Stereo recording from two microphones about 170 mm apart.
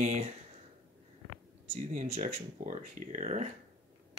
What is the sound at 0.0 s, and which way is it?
Speech, 40° right (ahead or behind).